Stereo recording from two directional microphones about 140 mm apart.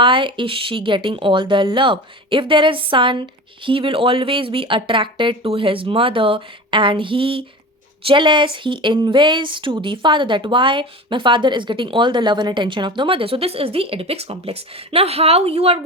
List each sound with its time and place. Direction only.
0.0 s speech: 35° right (ahead or behind)